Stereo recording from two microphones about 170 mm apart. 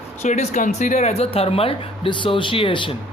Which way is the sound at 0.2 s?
45° left (ahead or behind).